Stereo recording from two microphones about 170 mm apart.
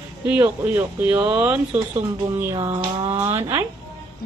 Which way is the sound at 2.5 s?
25° right (ahead or behind).